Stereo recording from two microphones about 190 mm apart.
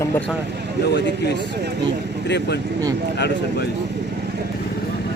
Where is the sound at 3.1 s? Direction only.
60° left (ahead or behind).